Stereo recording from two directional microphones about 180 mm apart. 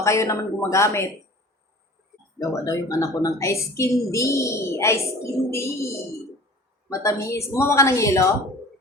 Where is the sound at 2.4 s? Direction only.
20° left (ahead or behind).